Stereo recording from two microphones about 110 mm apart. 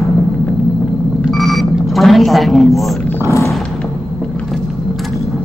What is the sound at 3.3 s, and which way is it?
Roaring cats, 25° left (ahead or behind).